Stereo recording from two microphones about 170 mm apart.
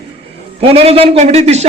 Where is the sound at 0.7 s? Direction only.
35° right (ahead or behind).